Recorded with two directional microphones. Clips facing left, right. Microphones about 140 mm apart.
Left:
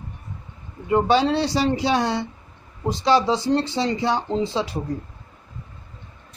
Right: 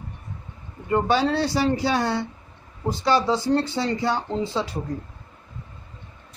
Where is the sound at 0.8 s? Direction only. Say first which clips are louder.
Left 3 dB; 15° left (ahead or behind).